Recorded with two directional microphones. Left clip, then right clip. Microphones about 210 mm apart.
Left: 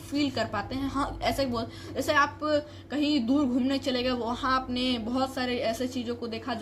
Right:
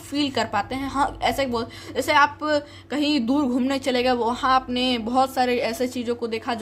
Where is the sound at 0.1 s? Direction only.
25° right (ahead or behind).